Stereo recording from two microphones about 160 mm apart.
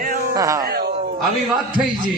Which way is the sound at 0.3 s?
20° right (ahead or behind).